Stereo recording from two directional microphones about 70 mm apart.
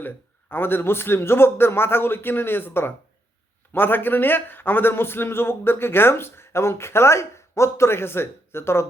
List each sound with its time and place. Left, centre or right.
0.0 s a man's voice: left